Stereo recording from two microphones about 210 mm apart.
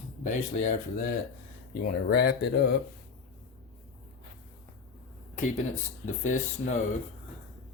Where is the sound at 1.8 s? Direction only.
50° left (ahead or behind).